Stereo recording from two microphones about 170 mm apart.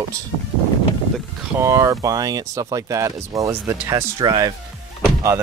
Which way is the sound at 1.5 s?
20° right (ahead or behind).